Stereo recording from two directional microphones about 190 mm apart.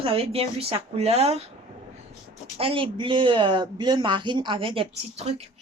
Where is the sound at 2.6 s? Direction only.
30° right (ahead or behind).